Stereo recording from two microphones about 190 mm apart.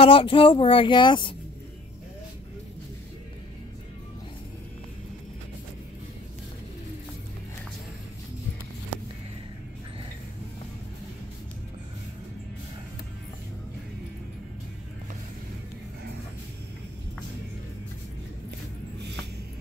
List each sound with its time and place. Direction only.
0.0 s speech: 25° left (ahead or behind)